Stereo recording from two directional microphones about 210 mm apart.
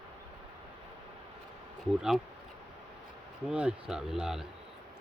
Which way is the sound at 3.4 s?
5° right (ahead or behind).